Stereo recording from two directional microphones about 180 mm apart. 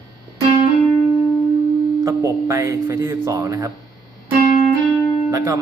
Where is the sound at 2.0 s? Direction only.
15° right (ahead or behind).